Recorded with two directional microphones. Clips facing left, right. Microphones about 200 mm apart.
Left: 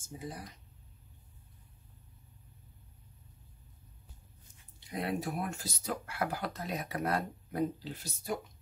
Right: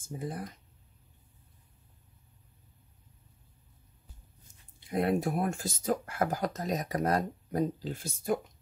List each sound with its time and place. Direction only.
0.0 s speech: 55° right (ahead or behind)
4.7 s speech: 50° right (ahead or behind)